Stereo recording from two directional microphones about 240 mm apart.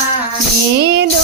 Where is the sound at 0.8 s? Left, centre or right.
Right.